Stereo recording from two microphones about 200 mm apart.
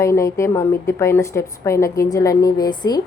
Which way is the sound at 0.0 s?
15° left (ahead or behind).